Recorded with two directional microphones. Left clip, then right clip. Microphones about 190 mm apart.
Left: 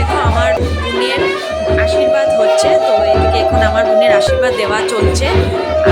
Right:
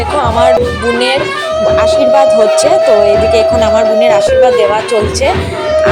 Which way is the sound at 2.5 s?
20° right (ahead or behind).